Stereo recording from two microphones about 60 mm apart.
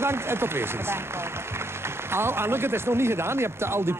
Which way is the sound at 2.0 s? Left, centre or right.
Right.